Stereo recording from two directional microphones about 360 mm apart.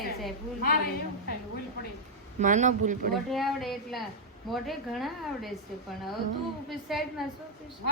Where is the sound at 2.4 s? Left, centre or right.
Right.